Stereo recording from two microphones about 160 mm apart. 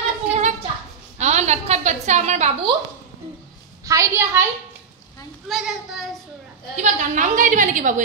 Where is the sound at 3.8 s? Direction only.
20° right (ahead or behind).